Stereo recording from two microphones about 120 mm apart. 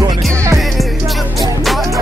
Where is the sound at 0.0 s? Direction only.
25° right (ahead or behind).